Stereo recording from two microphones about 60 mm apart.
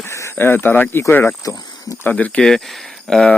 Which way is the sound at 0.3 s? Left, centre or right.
Left.